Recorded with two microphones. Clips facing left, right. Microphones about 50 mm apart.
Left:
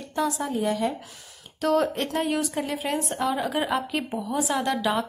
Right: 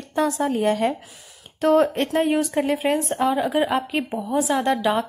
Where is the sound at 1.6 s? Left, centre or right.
Right.